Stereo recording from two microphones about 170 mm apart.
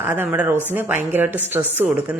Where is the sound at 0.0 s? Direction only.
10° right (ahead or behind).